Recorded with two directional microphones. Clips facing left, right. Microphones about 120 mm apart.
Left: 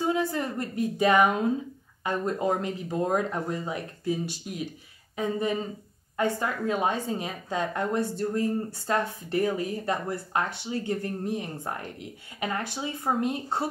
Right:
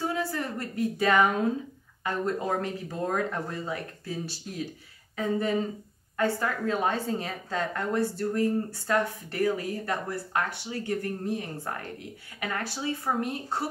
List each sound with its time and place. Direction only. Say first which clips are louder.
0.0 s a woman's voice: left 3 dB; 20° left (ahead or behind)